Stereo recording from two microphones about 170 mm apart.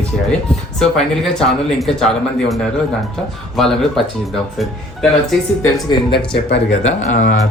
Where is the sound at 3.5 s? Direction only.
Centre (ahead or behind).